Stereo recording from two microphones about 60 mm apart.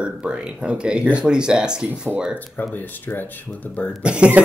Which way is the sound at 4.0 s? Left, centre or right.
Centre.